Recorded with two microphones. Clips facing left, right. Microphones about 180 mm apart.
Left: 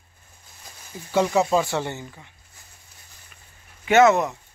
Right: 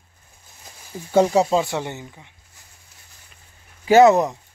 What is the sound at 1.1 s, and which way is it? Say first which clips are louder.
Speech: right 3 dB; 35° right (ahead or behind).